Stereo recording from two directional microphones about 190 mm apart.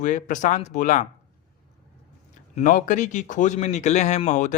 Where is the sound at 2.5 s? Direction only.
45° left (ahead or behind).